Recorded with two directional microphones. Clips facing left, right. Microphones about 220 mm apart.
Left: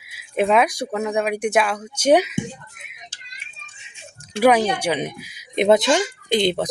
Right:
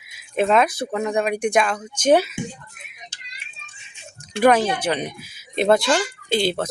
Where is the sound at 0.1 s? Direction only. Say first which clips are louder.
Even; 10° left (ahead or behind).